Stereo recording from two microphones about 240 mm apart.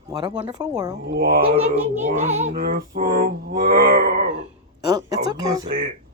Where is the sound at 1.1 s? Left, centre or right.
Right.